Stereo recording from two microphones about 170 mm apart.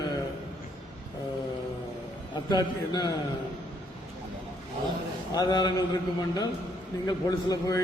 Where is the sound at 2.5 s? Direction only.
25° left (ahead or behind).